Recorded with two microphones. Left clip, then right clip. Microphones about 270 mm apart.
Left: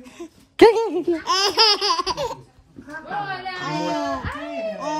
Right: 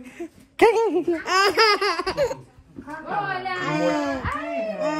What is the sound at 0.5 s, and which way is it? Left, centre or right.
Speech, left.